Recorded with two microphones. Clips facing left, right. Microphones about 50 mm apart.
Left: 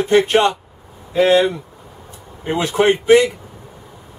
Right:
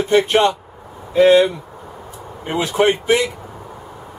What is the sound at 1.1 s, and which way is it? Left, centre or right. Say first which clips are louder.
Speech: right 2 dB; centre.